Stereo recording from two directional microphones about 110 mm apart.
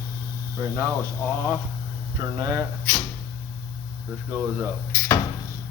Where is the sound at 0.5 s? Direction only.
25° right (ahead or behind).